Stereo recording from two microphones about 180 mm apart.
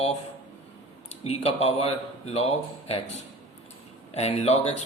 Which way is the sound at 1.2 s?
35° left (ahead or behind).